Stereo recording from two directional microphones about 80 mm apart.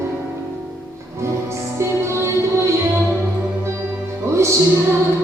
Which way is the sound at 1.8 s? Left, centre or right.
Right.